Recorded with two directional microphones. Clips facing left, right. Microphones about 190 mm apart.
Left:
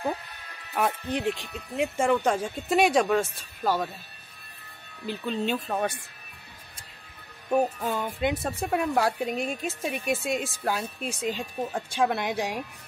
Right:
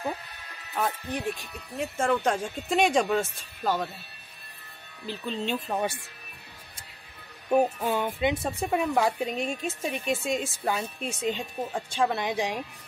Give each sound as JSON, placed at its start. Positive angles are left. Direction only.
{"t": 0.7, "sound": "speech", "side_deg": 20}
{"t": 5.2, "sound": "speech", "side_deg": 10}
{"t": 5.7, "sound": "speech", "side_deg": -10}
{"t": 7.5, "sound": "speech", "side_deg": -5}